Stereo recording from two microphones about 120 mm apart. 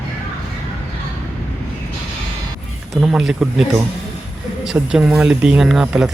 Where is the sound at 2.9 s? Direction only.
5° right (ahead or behind).